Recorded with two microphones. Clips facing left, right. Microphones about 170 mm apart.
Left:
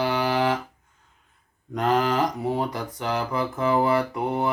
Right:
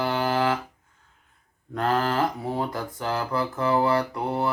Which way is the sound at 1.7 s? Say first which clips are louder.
Left 2 dB; 15° left (ahead or behind).